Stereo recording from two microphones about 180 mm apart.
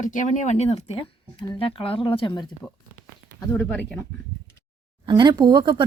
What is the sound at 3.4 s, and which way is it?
Speech, 10° left (ahead or behind).